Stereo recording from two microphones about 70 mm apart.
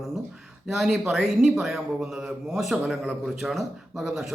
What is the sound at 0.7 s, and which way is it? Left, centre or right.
A man's voice, centre.